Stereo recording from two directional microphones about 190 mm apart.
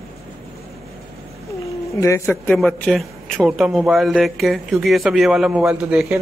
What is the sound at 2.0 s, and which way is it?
Speech, 15° left (ahead or behind).